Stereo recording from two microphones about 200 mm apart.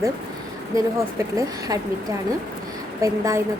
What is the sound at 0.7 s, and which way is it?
Speech, 15° right (ahead or behind).